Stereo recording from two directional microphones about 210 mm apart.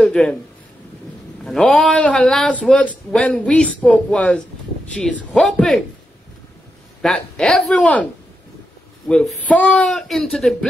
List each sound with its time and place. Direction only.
0.0 s a sound: 5° left (ahead or behind)
1.4 s a man's voice: 5° left (ahead or behind)
7.0 s a man's voice: centre (ahead or behind)